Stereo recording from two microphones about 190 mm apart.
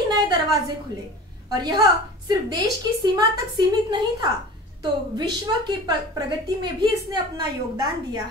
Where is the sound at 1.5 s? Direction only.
20° right (ahead or behind).